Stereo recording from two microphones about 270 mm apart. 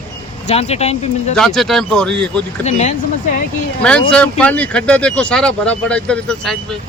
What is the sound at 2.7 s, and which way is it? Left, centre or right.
Speech, left.